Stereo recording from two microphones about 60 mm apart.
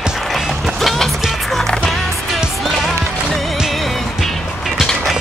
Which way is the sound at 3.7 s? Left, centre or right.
Centre.